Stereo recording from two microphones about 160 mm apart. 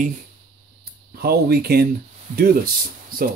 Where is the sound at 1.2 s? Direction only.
80° right.